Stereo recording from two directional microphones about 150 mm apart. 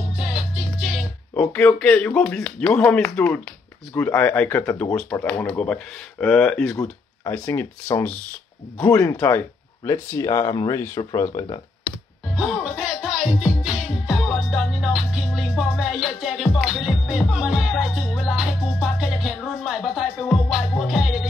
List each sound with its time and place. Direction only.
0.1 s music: 5° right (ahead or behind)
1.3 s speech: 10° left (ahead or behind); by 11.6 s 25° left (ahead or behind)
12.4 s music: centre (ahead or behind)